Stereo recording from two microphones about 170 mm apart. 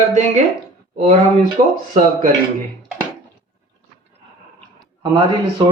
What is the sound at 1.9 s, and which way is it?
Speech, 45° right (ahead or behind).